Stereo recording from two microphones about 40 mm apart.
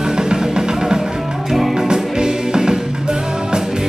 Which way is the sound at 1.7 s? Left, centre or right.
Centre.